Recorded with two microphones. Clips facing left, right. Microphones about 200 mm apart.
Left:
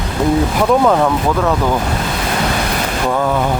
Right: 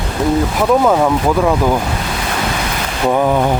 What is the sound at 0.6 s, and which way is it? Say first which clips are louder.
Speech: right 1 dB; 5° right (ahead or behind).